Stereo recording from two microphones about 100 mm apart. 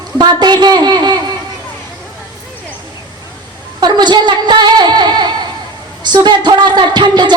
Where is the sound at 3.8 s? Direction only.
45° right (ahead or behind).